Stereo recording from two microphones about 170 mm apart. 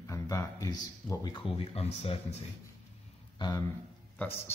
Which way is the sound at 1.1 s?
25° left (ahead or behind).